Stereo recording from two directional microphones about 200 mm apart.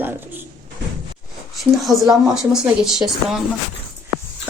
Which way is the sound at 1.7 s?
Centre (ahead or behind).